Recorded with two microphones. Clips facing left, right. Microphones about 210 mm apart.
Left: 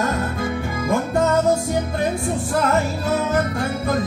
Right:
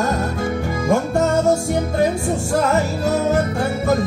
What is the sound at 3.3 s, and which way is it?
Music, 45° right (ahead or behind).